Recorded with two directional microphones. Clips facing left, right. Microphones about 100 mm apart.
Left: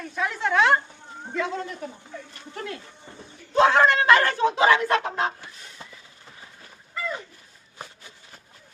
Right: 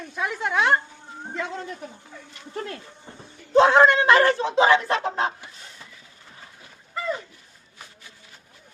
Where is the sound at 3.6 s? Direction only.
25° right (ahead or behind).